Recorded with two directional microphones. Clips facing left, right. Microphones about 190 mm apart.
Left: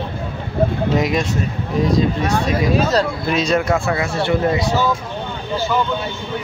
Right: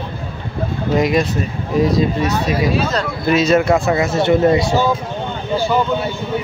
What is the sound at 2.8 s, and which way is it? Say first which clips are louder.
Speech: left 3 dB; 40° left (ahead or behind).